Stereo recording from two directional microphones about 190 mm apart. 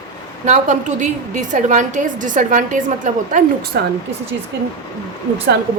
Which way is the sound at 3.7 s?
55° right (ahead or behind).